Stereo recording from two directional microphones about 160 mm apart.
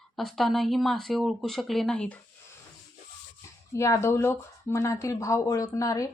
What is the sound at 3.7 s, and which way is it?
Speech, 20° left (ahead or behind).